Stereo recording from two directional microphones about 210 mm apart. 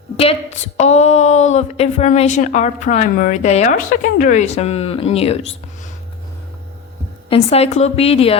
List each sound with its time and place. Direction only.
0.2 s speech: 30° left (ahead or behind)
7.3 s a woman's voice: 30° left (ahead or behind)